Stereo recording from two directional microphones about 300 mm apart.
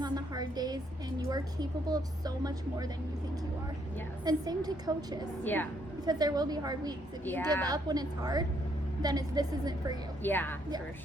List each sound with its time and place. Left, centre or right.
0.0 s a sound: centre
1.3 s a woman's voice: centre
4.3 s a woman's voice: centre
5.4 s a woman's voice: centre
6.1 s a woman's voice: centre
10.2 s a woman's voice: centre